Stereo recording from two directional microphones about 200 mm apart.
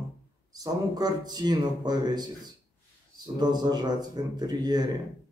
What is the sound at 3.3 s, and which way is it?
Speech, 20° right (ahead or behind).